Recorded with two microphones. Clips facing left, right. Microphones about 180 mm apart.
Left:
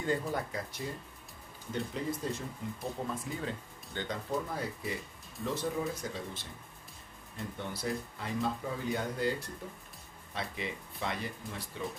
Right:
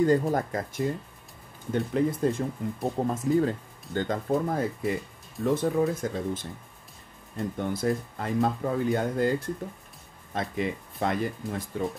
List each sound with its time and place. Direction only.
0.0 s speech: 45° right (ahead or behind)
10.3 s speech: 50° right (ahead or behind)